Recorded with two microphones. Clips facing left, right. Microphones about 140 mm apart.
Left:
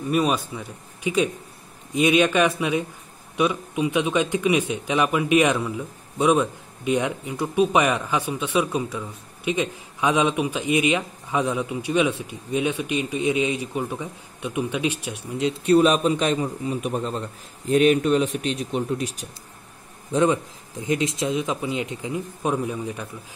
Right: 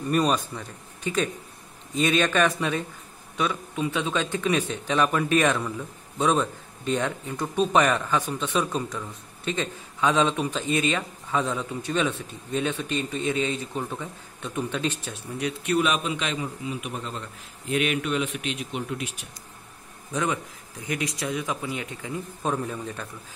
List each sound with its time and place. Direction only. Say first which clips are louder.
0.1 s speech: left 1 dB; 5° left (ahead or behind)
15.4 s a man's voice: left 7 dB; 35° left (ahead or behind); by 23.0 s 10° left (ahead or behind)